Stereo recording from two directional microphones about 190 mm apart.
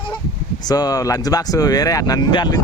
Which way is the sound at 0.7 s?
20° left (ahead or behind).